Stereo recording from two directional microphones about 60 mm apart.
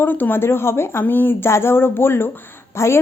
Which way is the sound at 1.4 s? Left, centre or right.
Left.